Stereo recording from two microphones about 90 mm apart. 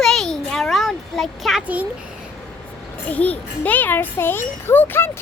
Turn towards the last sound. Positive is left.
turn(degrees=25)  # may be behind; listen again after turning